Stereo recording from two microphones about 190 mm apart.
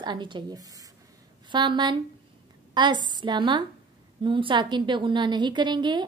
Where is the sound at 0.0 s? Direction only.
25° right (ahead or behind).